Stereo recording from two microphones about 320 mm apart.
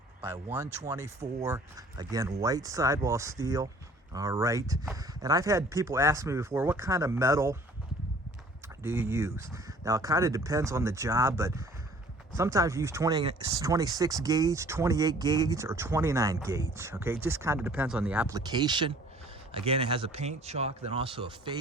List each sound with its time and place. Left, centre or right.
0.2 s speech: centre
8.8 s speech: centre